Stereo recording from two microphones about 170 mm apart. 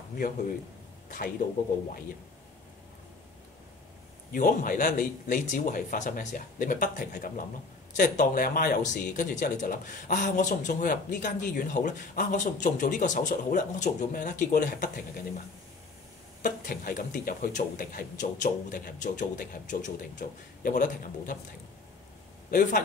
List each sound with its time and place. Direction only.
1.0 s a sound: 55° left (ahead or behind)
4.3 s speech: 55° left (ahead or behind)
16.4 s speech: 50° left (ahead or behind)
22.5 s a man's voice: 50° left (ahead or behind)